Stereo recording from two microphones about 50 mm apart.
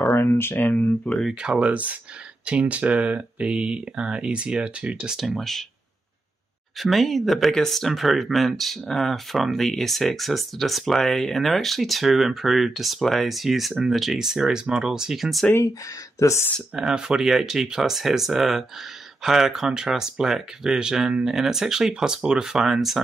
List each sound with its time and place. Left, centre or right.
0.2 s a sound: left
0.6 s speech: left
1.4 s speech: centre
1.7 s speech: right
5.1 s speech: centre
5.4 s speech: centre
6.8 s speech: centre
16.2 s speech: left
16.7 s speech: centre